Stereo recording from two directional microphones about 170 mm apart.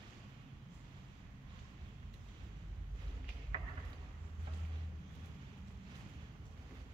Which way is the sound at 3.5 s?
30° right (ahead or behind).